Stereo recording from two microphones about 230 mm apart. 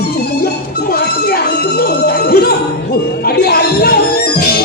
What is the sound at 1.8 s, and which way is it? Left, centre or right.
Speech, left.